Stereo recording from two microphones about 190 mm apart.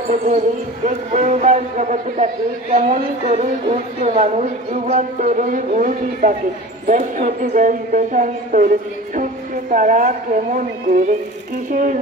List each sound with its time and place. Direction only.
0.1 s speech: 40° right (ahead or behind)